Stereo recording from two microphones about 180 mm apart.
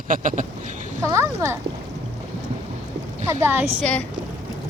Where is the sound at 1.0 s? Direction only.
15° right (ahead or behind).